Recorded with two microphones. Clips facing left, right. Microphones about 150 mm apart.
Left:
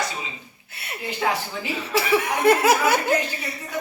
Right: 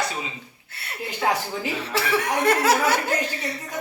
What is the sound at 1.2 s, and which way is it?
Speech, 35° right (ahead or behind).